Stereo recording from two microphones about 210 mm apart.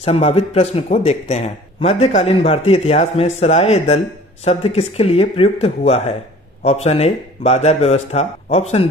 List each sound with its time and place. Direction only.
0.0 s a man's voice: 30° left (ahead or behind)